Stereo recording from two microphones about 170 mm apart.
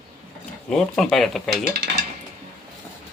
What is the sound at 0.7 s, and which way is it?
Speech, centre (ahead or behind).